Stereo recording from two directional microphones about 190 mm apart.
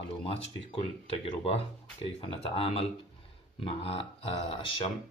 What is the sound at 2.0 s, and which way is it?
Speech, 30° left (ahead or behind).